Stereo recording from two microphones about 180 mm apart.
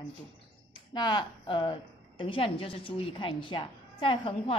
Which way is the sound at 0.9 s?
25° left (ahead or behind).